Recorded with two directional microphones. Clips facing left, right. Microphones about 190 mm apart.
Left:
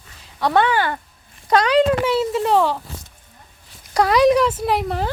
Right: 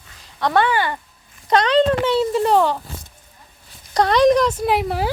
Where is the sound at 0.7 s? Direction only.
10° right (ahead or behind).